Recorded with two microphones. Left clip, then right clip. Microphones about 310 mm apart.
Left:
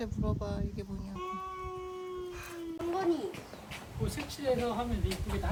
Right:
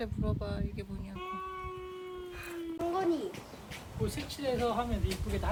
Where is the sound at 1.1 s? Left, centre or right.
Left.